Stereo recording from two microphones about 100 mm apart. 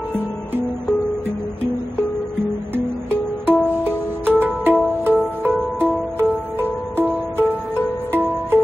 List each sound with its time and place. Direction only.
3.4 s music: 20° right (ahead or behind)
7.0 s music: 20° right (ahead or behind)